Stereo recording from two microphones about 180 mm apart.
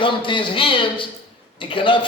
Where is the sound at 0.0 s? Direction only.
30° left (ahead or behind).